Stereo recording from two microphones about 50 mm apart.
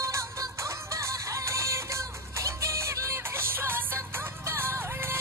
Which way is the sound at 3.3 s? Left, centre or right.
Right.